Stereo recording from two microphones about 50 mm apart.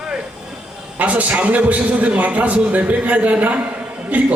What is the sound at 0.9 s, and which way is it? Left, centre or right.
A man's voice, right.